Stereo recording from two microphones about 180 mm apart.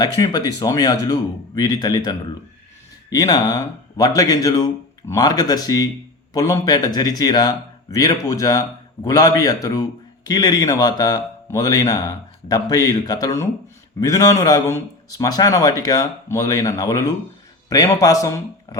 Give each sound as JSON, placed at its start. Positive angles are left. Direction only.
{"t": 0.0, "sound": "speech", "side_deg": 20}